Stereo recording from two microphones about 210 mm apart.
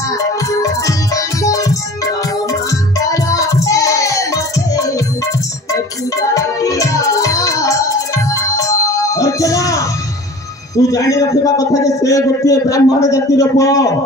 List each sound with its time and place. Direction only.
0.5 s music: 15° left (ahead or behind)
6.3 s music: 15° left (ahead or behind)
10.9 s a man's voice: 15° left (ahead or behind)